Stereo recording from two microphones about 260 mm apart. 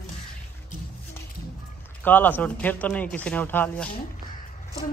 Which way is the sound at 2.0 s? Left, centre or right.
Centre.